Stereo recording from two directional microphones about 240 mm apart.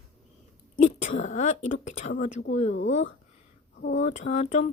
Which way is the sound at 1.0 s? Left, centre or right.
Left.